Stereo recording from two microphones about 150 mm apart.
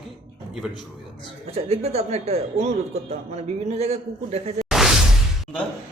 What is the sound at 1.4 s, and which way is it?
Speech, 45° right (ahead or behind).